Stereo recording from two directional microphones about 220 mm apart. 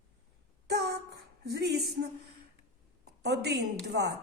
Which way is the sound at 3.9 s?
50° right (ahead or behind).